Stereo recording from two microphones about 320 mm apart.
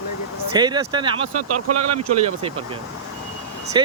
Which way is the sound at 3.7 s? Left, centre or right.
Centre.